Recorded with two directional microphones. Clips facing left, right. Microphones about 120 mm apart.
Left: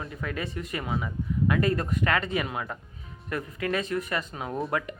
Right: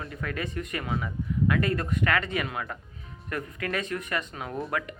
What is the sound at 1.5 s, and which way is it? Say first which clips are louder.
Speech: left 2 dB; 30° left (ahead or behind).